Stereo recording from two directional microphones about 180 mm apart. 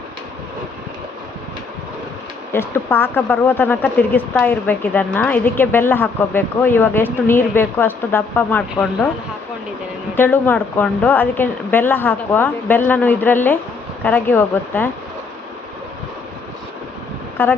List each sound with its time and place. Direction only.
2.5 s speech: 15° left (ahead or behind)
10.2 s speech: 10° left (ahead or behind)
17.4 s speech: 10° left (ahead or behind)